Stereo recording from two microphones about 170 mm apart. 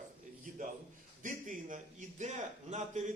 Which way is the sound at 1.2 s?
50° right (ahead or behind).